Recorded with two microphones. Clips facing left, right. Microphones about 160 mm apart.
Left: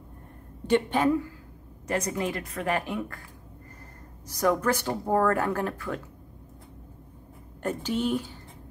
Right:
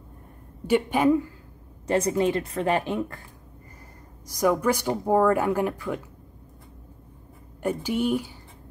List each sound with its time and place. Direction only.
0.7 s speech: 10° right (ahead or behind)
1.9 s speech: 25° right (ahead or behind)
4.4 s speech: 10° right (ahead or behind)
7.6 s speech: 10° right (ahead or behind)